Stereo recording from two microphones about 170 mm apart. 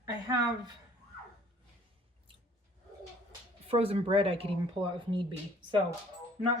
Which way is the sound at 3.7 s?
35° right (ahead or behind).